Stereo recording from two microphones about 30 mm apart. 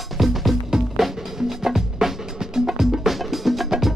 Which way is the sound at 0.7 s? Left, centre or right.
Centre.